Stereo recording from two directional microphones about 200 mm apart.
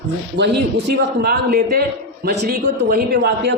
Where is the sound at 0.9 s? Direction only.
50° right (ahead or behind).